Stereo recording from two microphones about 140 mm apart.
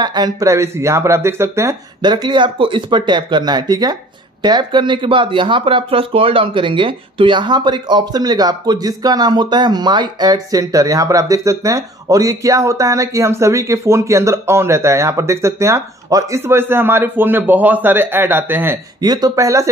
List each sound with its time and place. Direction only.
0.0 s speech: 30° right (ahead or behind)
2.0 s speech: 30° right (ahead or behind); by 18.8 s 15° right (ahead or behind)
18.9 s speech: 30° right (ahead or behind)